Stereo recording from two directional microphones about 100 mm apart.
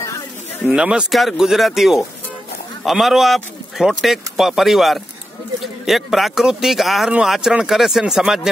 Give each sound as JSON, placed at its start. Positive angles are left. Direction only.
{"t": 0.0, "sound": "snake", "side_deg": 30}
{"t": 0.7, "sound": "speech", "side_deg": -10}